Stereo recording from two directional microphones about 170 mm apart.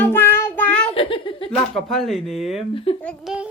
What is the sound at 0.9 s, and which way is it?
Speech, 30° left (ahead or behind).